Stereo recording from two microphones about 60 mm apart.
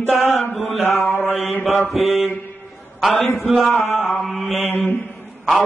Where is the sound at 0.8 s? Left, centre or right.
Left.